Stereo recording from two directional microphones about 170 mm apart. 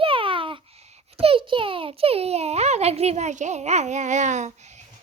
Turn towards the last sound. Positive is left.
turn(degrees=-45)  # may be behind; listen again after turning